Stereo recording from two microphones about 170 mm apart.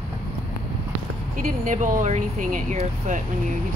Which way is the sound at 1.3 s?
50° right (ahead or behind).